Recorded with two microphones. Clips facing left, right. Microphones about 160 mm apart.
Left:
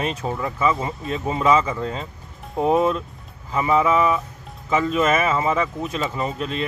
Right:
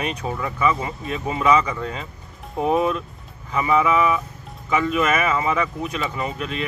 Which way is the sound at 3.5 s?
30° left (ahead or behind).